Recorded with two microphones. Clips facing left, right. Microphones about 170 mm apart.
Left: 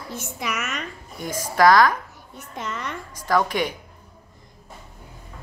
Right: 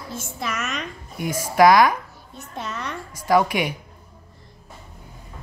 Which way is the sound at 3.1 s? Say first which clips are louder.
Right 3 dB; 10° right (ahead or behind).